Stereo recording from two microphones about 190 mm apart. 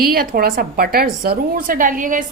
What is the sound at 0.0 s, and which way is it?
A woman's voice, 50° right (ahead or behind).